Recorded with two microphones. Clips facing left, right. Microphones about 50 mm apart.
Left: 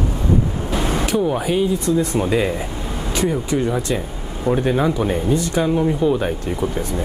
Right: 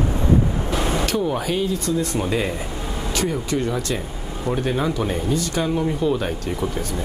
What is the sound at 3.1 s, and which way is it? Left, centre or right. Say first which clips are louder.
Speech: left 4 dB; left.